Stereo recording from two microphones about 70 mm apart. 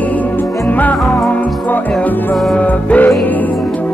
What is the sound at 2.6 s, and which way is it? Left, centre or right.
Music, centre.